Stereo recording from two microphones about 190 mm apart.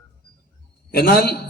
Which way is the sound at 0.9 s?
55° left (ahead or behind).